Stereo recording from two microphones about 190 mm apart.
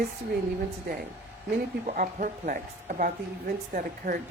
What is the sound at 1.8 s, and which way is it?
A woman's voice, 45° right (ahead or behind).